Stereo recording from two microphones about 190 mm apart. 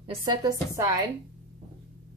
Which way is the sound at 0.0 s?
20° right (ahead or behind).